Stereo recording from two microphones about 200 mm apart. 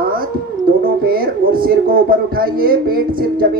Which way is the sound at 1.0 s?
45° right (ahead or behind).